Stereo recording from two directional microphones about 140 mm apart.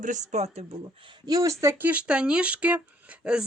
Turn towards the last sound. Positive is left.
turn(degrees=-10)  # may be behind; listen again after turning